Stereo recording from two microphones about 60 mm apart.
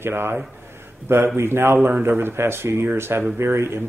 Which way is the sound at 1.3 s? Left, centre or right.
Right.